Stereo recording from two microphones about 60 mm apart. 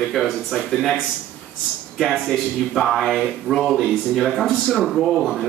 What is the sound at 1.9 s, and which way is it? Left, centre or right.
A man's voice, centre.